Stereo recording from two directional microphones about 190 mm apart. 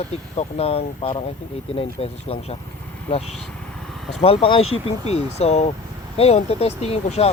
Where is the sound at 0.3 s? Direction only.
30° left (ahead or behind).